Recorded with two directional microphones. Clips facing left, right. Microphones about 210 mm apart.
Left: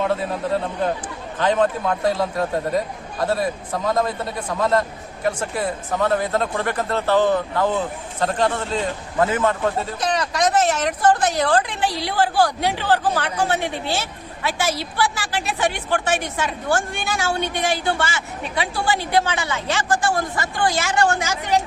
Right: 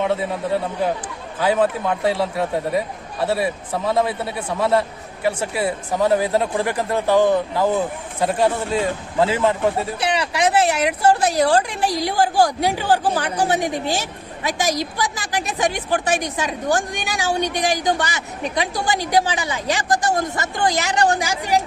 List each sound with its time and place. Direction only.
0.8 s a man's voice: 10° right (ahead or behind)
19.9 s a woman's voice: 40° right (ahead or behind)
20.7 s a man's voice: 20° right (ahead or behind)